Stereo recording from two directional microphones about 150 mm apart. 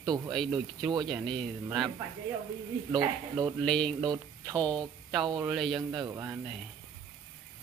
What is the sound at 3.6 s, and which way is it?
Speech, 5° left (ahead or behind).